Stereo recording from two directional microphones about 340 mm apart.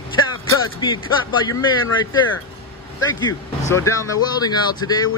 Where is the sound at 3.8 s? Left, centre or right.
Centre.